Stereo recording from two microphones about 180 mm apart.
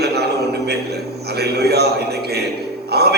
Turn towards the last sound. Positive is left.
turn(degrees=-65)  # may be behind; listen again after turning